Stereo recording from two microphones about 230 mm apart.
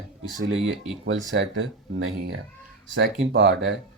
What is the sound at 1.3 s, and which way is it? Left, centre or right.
Speech, right.